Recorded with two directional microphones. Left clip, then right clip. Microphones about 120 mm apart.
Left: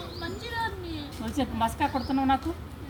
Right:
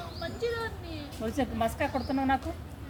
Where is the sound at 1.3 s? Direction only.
30° right (ahead or behind).